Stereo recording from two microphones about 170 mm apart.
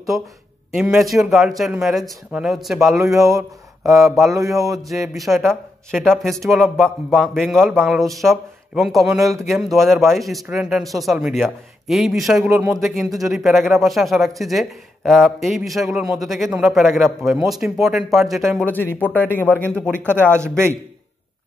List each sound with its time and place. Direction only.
0.7 s speech: centre (ahead or behind)
4.6 s a sound: 20° right (ahead or behind)
5.0 s speech: centre (ahead or behind)
18.7 s speech: 10° left (ahead or behind)
20.0 s speech: 10° right (ahead or behind)